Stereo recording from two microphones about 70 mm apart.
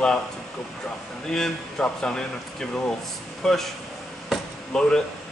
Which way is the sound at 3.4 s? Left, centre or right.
Centre.